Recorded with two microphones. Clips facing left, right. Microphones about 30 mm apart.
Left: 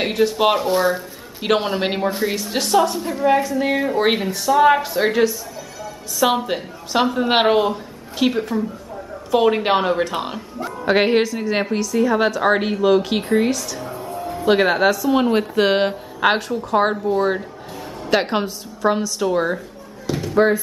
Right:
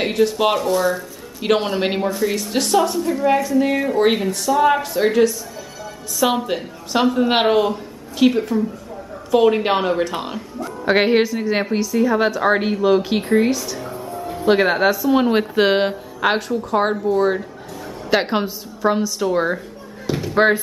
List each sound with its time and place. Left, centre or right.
0.0 s speech: centre
0.6 s speech: left
1.4 s a woman's voice: centre
14.2 s speech: centre
15.7 s a woman's voice: centre
20.1 s a sound: centre